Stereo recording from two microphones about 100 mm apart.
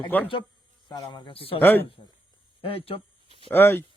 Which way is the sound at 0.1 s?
20° left (ahead or behind).